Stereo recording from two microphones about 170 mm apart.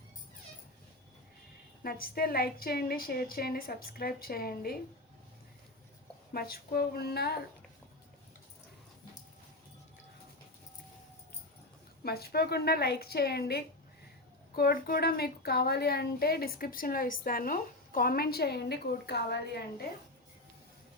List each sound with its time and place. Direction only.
1.8 s a woman's voice: 60° left (ahead or behind)
6.3 s a woman's voice: 65° left (ahead or behind)
12.0 s a woman's voice: 65° left (ahead or behind)